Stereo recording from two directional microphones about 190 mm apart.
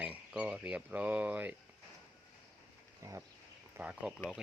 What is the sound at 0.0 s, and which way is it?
Speech, 5° right (ahead or behind).